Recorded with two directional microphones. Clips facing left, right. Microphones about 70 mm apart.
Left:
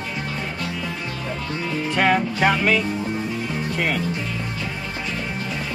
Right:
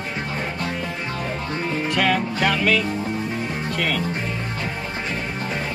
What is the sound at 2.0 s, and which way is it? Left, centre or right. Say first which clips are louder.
Speech: left 3 dB; centre.